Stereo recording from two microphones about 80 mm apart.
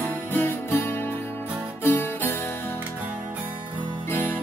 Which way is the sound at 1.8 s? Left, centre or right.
Left.